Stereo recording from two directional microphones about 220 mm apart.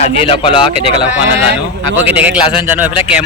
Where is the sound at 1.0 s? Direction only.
5° right (ahead or behind).